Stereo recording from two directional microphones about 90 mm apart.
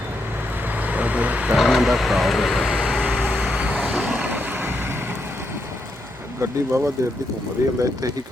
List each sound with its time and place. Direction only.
0.7 s vehicle: 15° right (ahead or behind)
1.5 s vehicle: centre (ahead or behind); by 4.9 s 25° right (ahead or behind)
6.4 s speech: 30° right (ahead or behind)